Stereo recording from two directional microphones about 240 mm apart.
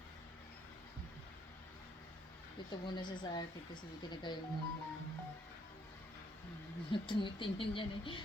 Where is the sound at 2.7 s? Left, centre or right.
Centre.